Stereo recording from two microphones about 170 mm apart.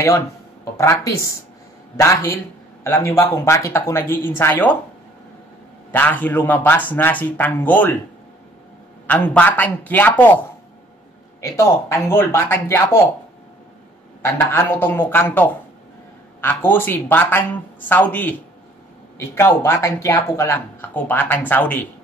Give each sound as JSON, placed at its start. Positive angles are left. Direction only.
{"t": 0.7, "sound": "speech", "side_deg": 15}
{"t": 5.9, "sound": "speech", "side_deg": 10}
{"t": 9.0, "sound": "speech", "side_deg": 10}
{"t": 11.4, "sound": "speech", "side_deg": 15}
{"t": 14.2, "sound": "speech", "side_deg": 15}